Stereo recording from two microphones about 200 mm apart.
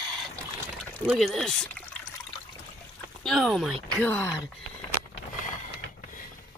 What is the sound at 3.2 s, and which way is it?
Speech, centre (ahead or behind).